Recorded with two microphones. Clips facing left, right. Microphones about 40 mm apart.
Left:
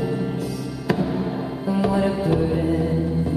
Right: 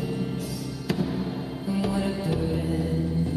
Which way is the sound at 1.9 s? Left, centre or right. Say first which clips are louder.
Left 7 dB; centre.